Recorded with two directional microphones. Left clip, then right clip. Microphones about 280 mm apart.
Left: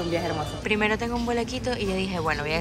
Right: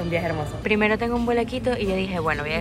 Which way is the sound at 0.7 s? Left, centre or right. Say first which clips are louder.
Right 4 dB; centre.